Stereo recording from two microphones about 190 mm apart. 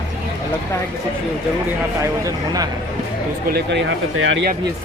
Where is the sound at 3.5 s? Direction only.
70° right (ahead or behind); by 4.4 s 90° right.